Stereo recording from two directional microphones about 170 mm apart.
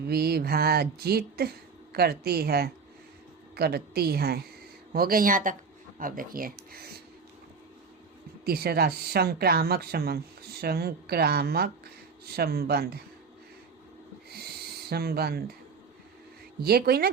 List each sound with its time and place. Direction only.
0.0 s speech: 65° right (ahead or behind)
8.4 s speech: 65° right (ahead or behind)
14.8 s speech: 65° right (ahead or behind)
16.6 s speech: 65° right (ahead or behind)